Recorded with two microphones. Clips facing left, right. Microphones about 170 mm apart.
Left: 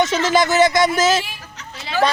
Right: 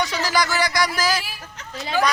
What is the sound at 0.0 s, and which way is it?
Speech, 20° left (ahead or behind).